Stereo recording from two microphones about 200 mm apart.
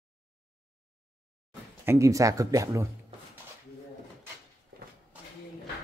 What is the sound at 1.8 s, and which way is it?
Speech, 15° right (ahead or behind).